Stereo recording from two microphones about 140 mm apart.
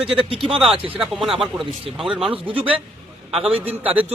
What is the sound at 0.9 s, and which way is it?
Speech, centre (ahead or behind).